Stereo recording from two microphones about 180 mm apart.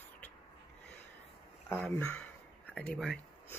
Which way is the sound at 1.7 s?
10° left (ahead or behind).